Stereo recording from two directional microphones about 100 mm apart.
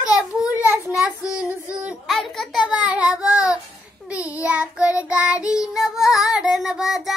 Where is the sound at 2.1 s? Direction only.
Centre (ahead or behind).